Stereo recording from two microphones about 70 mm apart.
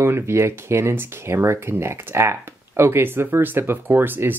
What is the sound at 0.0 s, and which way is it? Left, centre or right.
Speech, right.